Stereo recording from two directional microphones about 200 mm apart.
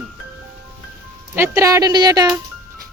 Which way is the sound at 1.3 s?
15° right (ahead or behind).